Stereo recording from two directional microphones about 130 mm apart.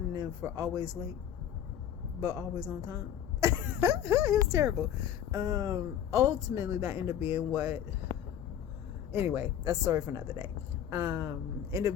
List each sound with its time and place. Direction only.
0.1 s speech: 25° right (ahead or behind)
2.2 s speech: 25° right (ahead or behind)
3.4 s a sound: 20° right (ahead or behind)
4.0 s speech: 25° right (ahead or behind)
9.1 s speech: 15° right (ahead or behind)
9.6 s speech: 25° right (ahead or behind)